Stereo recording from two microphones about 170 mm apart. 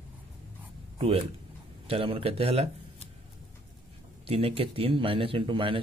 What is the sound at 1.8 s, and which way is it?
Speech, 35° right (ahead or behind).